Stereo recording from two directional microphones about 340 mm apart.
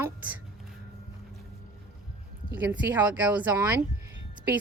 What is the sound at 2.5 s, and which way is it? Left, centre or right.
A woman's voice, centre.